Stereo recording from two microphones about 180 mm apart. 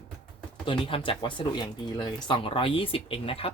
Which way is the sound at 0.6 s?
30° left (ahead or behind).